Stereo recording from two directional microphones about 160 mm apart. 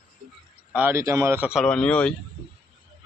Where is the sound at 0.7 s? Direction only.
10° right (ahead or behind).